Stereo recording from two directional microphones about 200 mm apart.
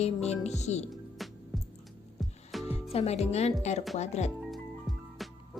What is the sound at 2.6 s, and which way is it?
Speech, 30° left (ahead or behind).